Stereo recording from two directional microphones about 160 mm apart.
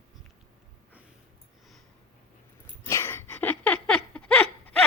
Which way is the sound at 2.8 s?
15° left (ahead or behind).